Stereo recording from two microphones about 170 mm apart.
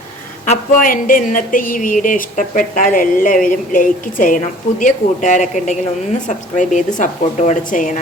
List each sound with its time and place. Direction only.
0.4 s a woman's voice: 45° left (ahead or behind)